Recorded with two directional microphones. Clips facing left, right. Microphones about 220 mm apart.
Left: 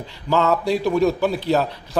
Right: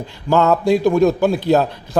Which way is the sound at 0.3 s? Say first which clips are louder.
Right 5 dB; 45° right (ahead or behind).